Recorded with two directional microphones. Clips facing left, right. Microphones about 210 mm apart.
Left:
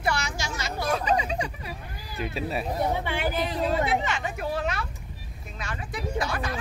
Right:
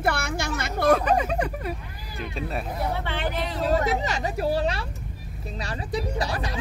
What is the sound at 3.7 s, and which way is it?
Speech, 40° right (ahead or behind).